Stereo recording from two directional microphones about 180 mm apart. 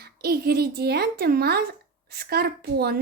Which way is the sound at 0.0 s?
60° right (ahead or behind).